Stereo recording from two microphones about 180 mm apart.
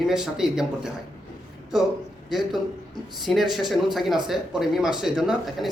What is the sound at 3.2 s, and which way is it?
A man's voice, centre (ahead or behind).